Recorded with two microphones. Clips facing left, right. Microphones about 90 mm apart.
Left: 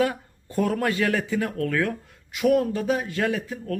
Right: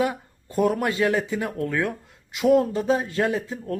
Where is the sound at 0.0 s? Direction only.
20° right (ahead or behind).